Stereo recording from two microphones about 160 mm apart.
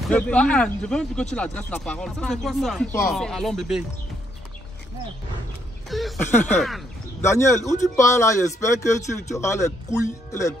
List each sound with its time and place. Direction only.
0.0 s speech: 5° left (ahead or behind)
5.9 s speech: centre (ahead or behind)
6.3 s speech: 10° left (ahead or behind)